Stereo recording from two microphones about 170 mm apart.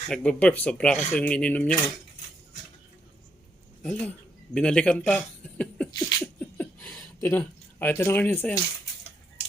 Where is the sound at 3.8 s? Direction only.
10° left (ahead or behind).